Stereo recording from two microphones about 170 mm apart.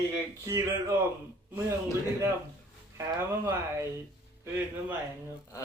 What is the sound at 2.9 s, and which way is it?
Speech, 15° right (ahead or behind).